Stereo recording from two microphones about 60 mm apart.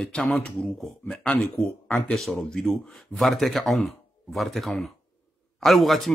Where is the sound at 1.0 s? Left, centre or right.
Centre.